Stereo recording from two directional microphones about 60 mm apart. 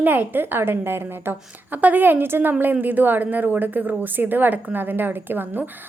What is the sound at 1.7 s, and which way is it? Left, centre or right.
A woman's voice, right.